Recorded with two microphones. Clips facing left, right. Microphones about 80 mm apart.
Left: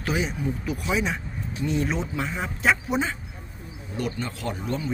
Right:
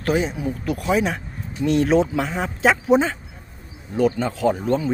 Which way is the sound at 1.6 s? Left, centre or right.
Right.